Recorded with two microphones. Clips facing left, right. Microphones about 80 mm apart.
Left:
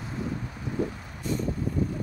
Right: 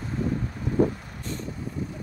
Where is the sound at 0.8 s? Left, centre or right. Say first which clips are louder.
Right 8 dB; right.